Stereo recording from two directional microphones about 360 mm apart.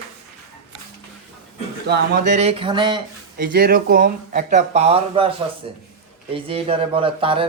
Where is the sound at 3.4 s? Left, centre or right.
Right.